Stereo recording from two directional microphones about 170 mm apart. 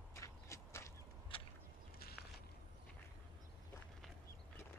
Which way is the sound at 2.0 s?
65° left (ahead or behind).